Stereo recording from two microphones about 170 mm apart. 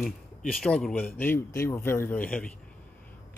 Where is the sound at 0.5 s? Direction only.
5° left (ahead or behind).